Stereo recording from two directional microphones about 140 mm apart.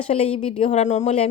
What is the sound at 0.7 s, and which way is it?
Speech, 55° left (ahead or behind).